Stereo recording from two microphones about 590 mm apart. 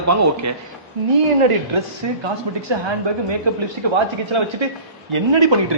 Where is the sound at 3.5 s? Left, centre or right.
Right.